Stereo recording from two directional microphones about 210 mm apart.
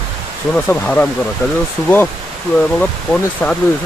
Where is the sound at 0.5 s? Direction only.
5° left (ahead or behind).